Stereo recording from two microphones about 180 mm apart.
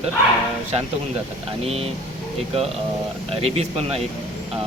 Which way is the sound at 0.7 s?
35° right (ahead or behind).